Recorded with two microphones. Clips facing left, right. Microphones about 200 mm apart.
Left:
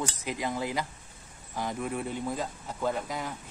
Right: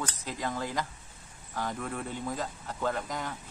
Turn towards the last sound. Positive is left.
turn(degrees=10)  # may be behind; listen again after turning